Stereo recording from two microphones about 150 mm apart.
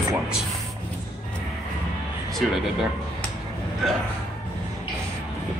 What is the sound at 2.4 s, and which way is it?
Speech, centre (ahead or behind).